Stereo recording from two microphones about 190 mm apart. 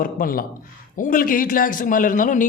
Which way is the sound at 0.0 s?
50° left (ahead or behind).